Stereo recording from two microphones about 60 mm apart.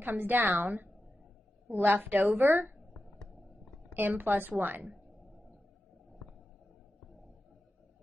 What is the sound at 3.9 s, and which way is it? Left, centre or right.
A woman's voice, right.